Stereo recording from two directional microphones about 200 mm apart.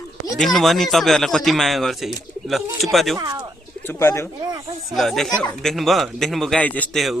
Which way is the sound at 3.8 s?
10° left (ahead or behind).